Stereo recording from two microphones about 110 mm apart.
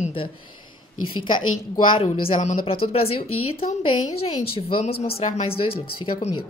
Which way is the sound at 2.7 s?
60° left (ahead or behind).